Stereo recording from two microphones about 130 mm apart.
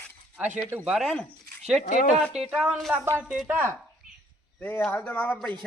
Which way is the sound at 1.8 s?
80° left.